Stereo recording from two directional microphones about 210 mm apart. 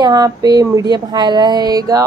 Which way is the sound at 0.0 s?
20° right (ahead or behind).